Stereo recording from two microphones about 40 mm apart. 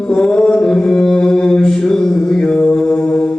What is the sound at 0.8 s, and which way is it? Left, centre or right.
Mantra, centre.